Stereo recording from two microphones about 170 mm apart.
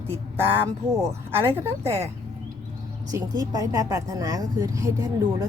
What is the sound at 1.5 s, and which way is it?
Speech, 15° right (ahead or behind).